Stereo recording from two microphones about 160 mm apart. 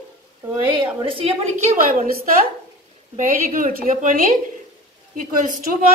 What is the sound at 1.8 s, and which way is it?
A woman's voice, 60° right (ahead or behind).